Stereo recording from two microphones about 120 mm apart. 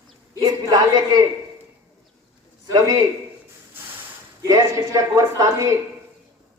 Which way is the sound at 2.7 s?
35° right (ahead or behind).